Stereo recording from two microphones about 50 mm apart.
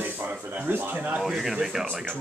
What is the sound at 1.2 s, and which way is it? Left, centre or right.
Speech, centre.